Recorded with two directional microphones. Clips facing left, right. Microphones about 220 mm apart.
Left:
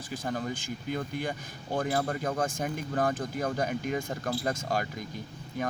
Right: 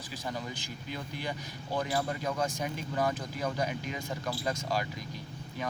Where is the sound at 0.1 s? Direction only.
50° left (ahead or behind).